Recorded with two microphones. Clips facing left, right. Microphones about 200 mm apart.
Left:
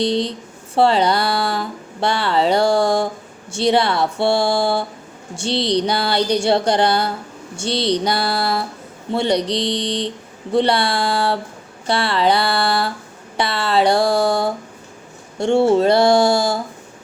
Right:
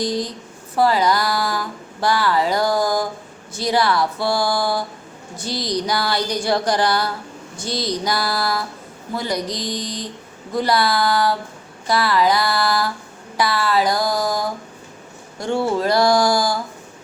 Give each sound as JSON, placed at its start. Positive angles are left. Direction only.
{"t": 0.0, "sound": "speech", "side_deg": 25}
{"t": 9.5, "sound": "a sound", "side_deg": 70}
{"t": 10.5, "sound": "speech", "side_deg": 30}